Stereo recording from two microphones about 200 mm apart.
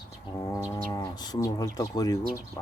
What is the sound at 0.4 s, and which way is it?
Livestock, 15° left (ahead or behind).